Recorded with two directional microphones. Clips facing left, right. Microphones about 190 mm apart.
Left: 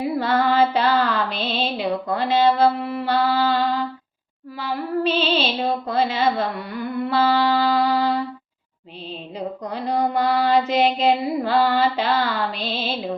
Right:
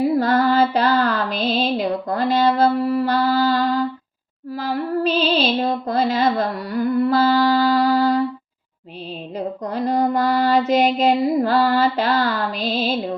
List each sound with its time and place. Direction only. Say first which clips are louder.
0.0 s music: right 4 dB; 40° right (ahead or behind)
9.6 s child singing: right 3 dB; 45° right (ahead or behind)